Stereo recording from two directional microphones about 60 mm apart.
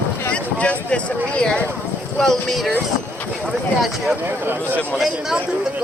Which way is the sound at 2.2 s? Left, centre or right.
Centre.